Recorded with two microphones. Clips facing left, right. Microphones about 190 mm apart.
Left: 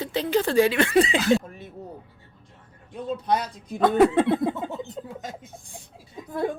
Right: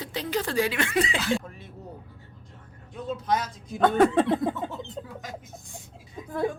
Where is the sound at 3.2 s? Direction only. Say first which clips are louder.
Left 2 dB; 35° left (ahead or behind).